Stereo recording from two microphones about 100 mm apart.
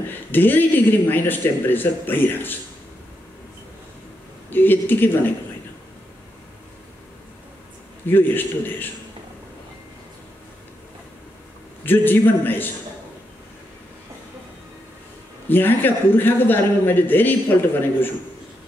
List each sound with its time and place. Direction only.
0.3 s speech: 20° left (ahead or behind)
4.5 s speech: 20° left (ahead or behind)
8.1 s speech: 20° left (ahead or behind)
11.8 s speech: 20° left (ahead or behind)
15.4 s speech: 20° left (ahead or behind)